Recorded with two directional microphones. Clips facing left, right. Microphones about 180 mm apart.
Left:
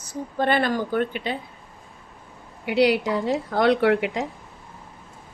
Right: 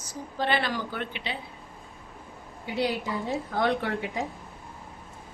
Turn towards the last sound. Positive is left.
turn(degrees=75)  # may be behind; listen again after turning